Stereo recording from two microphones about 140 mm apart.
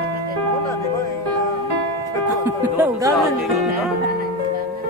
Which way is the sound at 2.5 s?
15° right (ahead or behind).